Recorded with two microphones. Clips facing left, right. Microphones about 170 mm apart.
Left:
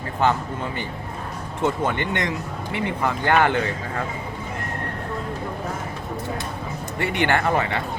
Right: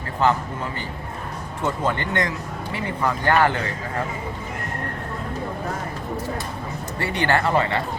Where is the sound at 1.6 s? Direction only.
20° left (ahead or behind).